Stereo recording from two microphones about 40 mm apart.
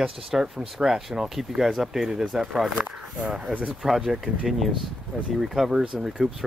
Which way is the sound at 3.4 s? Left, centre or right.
Right.